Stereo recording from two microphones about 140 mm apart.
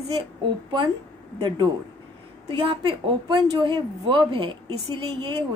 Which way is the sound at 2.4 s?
40° right (ahead or behind).